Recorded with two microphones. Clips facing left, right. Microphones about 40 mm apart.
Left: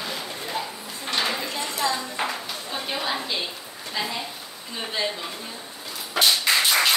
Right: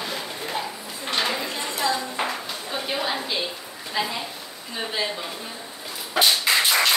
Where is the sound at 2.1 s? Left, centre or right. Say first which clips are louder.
Right 1 dB; centre.